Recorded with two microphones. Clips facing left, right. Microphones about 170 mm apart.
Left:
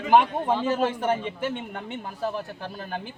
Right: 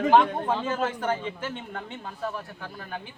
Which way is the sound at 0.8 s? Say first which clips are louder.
Left 3 dB; 15° left (ahead or behind).